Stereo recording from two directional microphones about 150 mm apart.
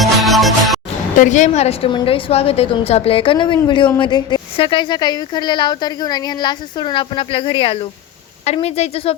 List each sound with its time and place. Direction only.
0.0 s music: centre (ahead or behind)
1.2 s a woman's voice: 55° left (ahead or behind)